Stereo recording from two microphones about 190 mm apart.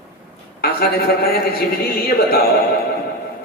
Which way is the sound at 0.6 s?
55° left (ahead or behind).